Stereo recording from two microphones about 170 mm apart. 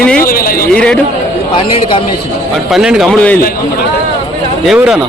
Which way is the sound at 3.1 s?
10° left (ahead or behind).